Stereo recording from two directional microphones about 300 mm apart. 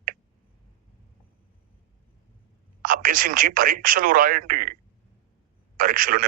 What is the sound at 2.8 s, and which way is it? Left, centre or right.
Speech, right.